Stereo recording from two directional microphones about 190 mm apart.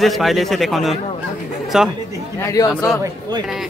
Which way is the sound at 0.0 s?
Centre (ahead or behind).